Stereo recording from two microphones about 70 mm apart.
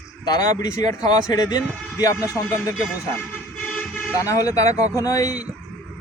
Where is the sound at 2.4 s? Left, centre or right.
Left.